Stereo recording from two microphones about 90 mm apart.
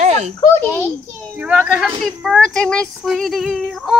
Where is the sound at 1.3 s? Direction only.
15° right (ahead or behind).